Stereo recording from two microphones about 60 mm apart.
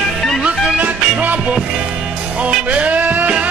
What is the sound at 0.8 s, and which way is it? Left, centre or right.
Music, right.